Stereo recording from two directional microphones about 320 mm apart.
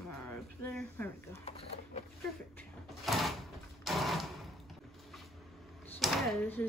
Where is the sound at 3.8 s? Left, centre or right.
Centre.